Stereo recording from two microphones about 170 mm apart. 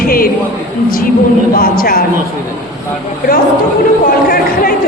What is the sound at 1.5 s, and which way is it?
Speech, 60° left (ahead or behind).